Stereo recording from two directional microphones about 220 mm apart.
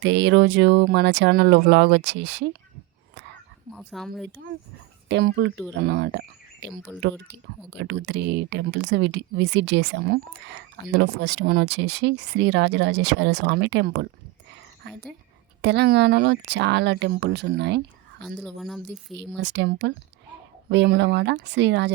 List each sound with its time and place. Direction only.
0.0 s speech: 55° right (ahead or behind)
3.8 s speech: centre (ahead or behind)
5.0 s speech: 55° right (ahead or behind)
6.7 s speech: centre (ahead or behind)
7.0 s speech: 55° right (ahead or behind)
15.6 s speech: 50° right (ahead or behind)
18.2 s speech: 5° left (ahead or behind)
19.4 s speech: 55° right (ahead or behind)